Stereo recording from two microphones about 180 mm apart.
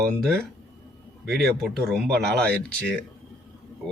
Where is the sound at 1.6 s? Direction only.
Centre (ahead or behind).